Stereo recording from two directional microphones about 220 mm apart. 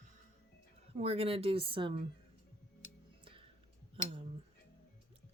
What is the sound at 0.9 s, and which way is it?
Speech, 25° right (ahead or behind).